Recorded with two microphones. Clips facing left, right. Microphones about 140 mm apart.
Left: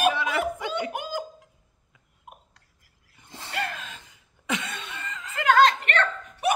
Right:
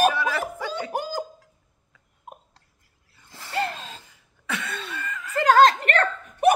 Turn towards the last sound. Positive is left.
turn(degrees=-45)  # may be behind; listen again after turning